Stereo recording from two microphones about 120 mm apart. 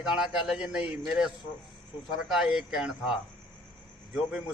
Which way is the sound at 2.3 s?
5° right (ahead or behind).